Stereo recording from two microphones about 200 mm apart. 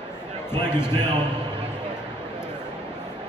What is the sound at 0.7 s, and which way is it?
Speech, 10° left (ahead or behind).